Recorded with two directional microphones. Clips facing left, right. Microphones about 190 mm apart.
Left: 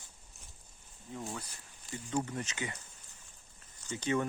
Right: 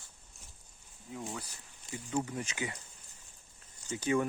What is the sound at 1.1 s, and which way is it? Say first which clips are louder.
Speech: even; 5° right (ahead or behind).